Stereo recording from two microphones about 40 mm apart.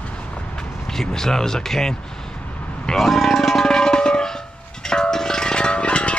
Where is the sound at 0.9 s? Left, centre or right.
Centre.